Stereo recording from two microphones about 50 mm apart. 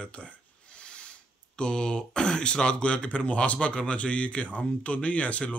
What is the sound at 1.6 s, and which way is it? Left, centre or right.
Speech, centre.